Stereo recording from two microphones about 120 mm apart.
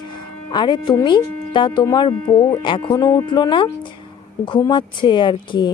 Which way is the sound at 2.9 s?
30° left (ahead or behind).